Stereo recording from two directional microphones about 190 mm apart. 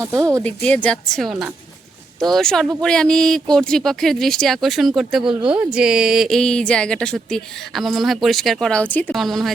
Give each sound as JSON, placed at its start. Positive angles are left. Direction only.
{"t": 0.2, "sound": "speech", "side_deg": -15}
{"t": 0.4, "sound": "speech", "side_deg": 5}